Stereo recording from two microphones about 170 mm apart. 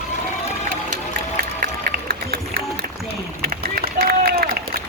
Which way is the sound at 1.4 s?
60° right (ahead or behind).